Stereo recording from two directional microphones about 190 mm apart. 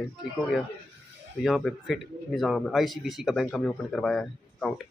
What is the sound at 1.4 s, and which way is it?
Speech, centre (ahead or behind).